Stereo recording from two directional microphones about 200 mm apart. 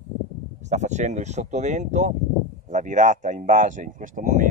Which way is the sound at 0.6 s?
35° right (ahead or behind).